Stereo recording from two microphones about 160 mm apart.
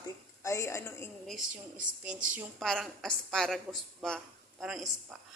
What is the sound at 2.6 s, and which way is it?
A man's voice, 5° left (ahead or behind).